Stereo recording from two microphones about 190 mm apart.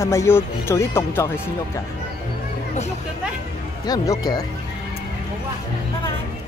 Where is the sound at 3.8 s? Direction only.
20° left (ahead or behind).